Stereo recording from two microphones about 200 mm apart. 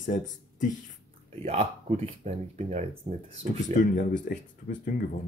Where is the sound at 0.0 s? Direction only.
40° left (ahead or behind).